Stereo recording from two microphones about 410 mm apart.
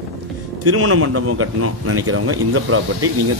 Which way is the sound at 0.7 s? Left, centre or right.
Right.